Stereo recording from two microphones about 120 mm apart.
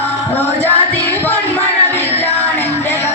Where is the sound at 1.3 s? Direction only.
15° left (ahead or behind).